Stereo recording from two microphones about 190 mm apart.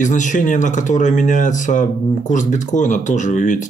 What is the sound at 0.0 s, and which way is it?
Speech, 40° left (ahead or behind).